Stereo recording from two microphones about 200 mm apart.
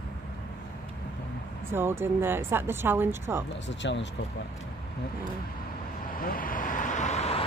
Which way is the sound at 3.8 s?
65° left (ahead or behind).